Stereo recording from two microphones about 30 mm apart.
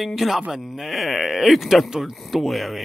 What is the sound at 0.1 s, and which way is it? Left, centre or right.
A man's voice, centre.